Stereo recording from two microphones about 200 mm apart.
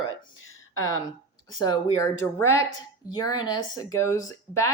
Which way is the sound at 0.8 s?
15° left (ahead or behind).